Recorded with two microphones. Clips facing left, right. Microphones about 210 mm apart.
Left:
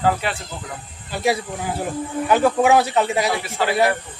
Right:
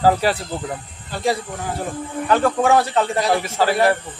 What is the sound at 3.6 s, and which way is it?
Speech, 40° right (ahead or behind).